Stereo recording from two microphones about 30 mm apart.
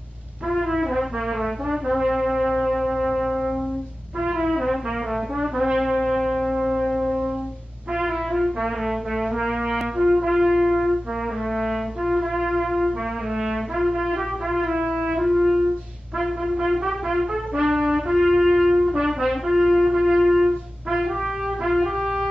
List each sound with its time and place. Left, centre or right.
0.5 s brass instrument: centre
4.2 s brass instrument: centre
4.5 s music: centre
5.6 s brass instrument: centre
8.0 s brass instrument: centre
9.5 s trumpet: centre
11.5 s music: centre
16.6 s music: centre
17.6 s trumpet: centre
19.9 s music: centre
21.7 s music: centre